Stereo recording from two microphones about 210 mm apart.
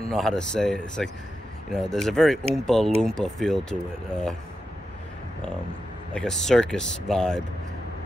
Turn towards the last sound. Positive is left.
turn(degrees=0)  # may be behind; listen again after turning